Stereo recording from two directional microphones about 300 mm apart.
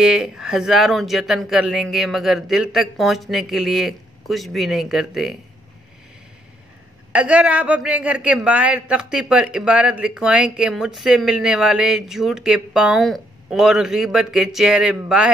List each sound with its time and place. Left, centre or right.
0.0 s a man's voice: centre
7.1 s a man's voice: centre